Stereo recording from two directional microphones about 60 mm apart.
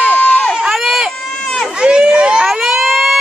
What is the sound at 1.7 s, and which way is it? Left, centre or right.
Speech, centre.